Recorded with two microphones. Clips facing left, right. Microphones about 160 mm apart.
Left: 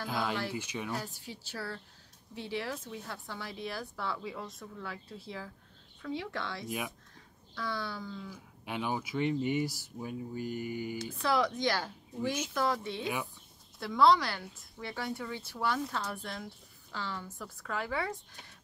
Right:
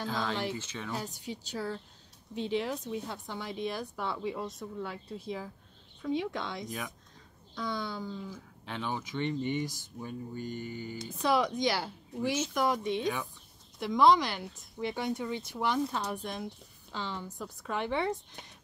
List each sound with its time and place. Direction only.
0.0 s speech: 10° left (ahead or behind)
0.9 s speech: 20° right (ahead or behind)
8.3 s speech: 10° left (ahead or behind)
11.0 s speech: 20° right (ahead or behind)